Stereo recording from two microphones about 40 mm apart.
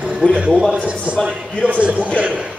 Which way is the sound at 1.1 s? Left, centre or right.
Right.